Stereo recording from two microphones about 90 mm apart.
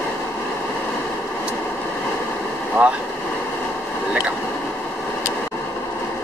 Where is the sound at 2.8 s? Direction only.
15° right (ahead or behind).